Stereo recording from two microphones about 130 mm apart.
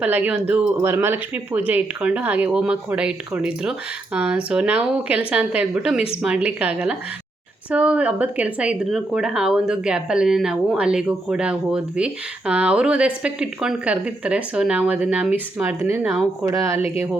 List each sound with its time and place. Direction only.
0.0 s speech: 15° right (ahead or behind)